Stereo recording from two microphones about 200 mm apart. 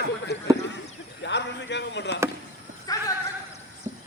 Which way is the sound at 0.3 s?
55° left (ahead or behind).